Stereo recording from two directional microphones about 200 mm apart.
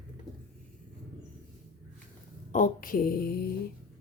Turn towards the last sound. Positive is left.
turn(degrees=50)  # may be behind; listen again after turning